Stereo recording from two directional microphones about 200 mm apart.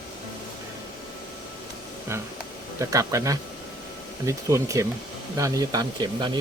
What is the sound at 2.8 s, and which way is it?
Speech, 15° right (ahead or behind).